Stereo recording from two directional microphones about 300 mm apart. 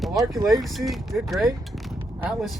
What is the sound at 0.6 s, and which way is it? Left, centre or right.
Speech, centre.